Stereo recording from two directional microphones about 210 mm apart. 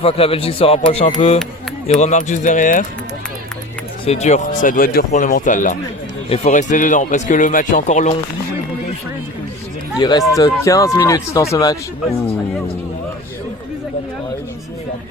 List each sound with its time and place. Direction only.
0.0 s speech: 30° left (ahead or behind)
4.0 s speech: 30° left (ahead or behind)
10.0 s speech: 20° left (ahead or behind)